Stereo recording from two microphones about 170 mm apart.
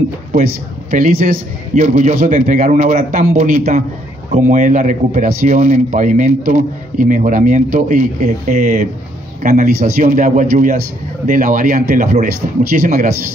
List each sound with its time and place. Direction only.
0.9 s a man's voice: 50° right (ahead or behind)